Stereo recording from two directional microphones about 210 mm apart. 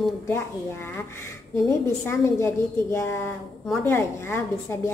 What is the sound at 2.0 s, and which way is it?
A woman's voice, 10° left (ahead or behind).